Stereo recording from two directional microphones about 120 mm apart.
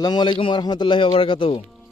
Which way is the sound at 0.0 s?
40° left (ahead or behind).